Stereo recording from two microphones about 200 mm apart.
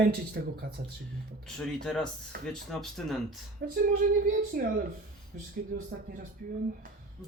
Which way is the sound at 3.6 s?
55° right (ahead or behind).